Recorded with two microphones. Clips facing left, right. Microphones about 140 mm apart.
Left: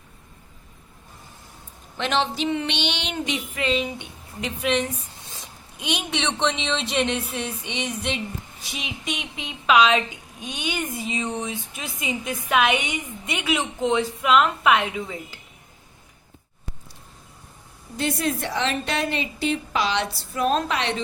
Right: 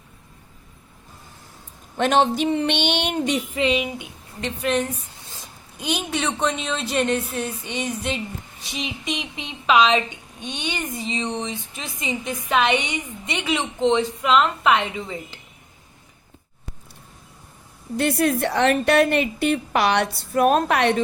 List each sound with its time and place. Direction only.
2.0 s a sound: 50° right (ahead or behind)
3.5 s a woman's voice: 20° right (ahead or behind)
4.4 s a woman's voice: 5° left (ahead or behind)
17.9 s a woman's voice: 60° right (ahead or behind)